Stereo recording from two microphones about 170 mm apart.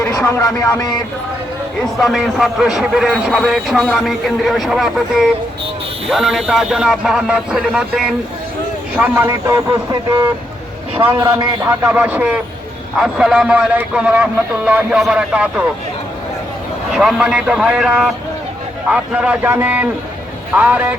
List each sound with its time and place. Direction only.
0.0 s speech: 15° left (ahead or behind)
2.0 s a man's voice: centre (ahead or behind)
6.1 s a man's voice: centre (ahead or behind)
9.0 s a man's voice: 15° right (ahead or behind)
16.9 s a man's voice: 5° right (ahead or behind)